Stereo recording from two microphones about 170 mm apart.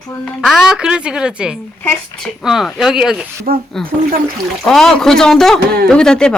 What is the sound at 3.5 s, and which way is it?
Speech, 55° right (ahead or behind).